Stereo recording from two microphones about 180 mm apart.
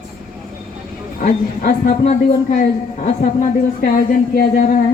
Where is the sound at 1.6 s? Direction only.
45° left (ahead or behind).